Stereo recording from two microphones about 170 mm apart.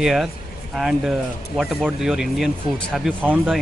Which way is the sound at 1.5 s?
Centre (ahead or behind).